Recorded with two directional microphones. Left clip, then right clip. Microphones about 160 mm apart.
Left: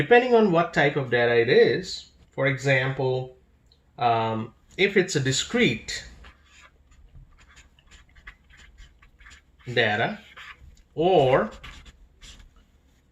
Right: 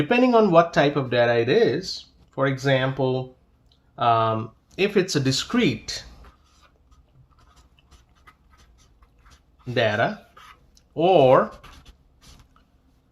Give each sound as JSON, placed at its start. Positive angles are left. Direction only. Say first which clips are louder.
{"t": 0.1, "sound": "speech", "louder": "even", "side_deg": -45}
{"t": 7.3, "sound": "duck", "louder": "left 4 dB", "side_deg": -15}
{"t": 9.7, "sound": "speech", "louder": "right 1 dB", "side_deg": -50}
{"t": 10.3, "sound": "a sound", "louder": "left 4 dB", "side_deg": -10}
{"t": 10.8, "sound": "speech", "louder": "right 3 dB", "side_deg": -50}
{"t": 11.5, "sound": "writing", "louder": "left 2 dB", "side_deg": -5}